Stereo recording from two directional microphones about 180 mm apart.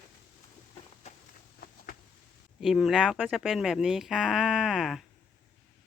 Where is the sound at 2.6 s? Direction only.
Centre (ahead or behind).